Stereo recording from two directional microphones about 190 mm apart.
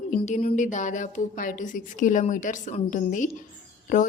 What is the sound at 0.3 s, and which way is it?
A woman's voice, 40° left (ahead or behind).